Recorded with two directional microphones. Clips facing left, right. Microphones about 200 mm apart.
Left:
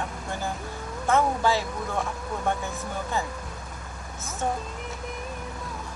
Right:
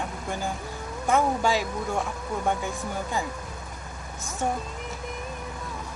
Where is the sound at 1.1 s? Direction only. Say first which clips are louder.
Even; 15° right (ahead or behind).